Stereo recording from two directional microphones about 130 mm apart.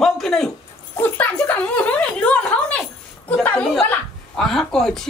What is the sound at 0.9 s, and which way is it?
Speech, 15° left (ahead or behind).